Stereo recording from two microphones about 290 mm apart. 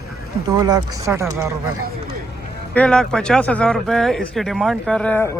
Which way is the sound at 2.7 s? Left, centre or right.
Centre.